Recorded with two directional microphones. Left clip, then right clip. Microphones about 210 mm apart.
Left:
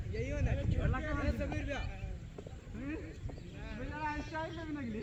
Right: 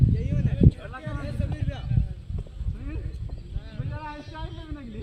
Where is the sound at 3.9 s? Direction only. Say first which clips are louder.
Even; 15° left (ahead or behind).